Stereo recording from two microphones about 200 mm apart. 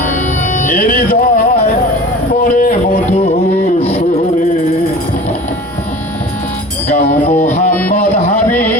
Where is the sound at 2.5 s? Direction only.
40° left (ahead or behind).